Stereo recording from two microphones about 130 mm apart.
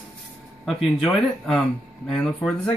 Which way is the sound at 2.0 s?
10° left (ahead or behind).